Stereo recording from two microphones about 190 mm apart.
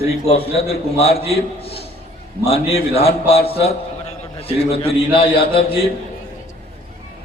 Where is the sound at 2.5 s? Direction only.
30° left (ahead or behind).